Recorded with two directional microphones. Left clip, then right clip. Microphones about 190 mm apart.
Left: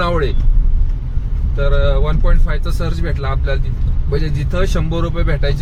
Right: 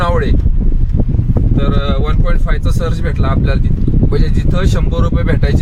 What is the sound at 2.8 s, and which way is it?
Speech, 20° right (ahead or behind).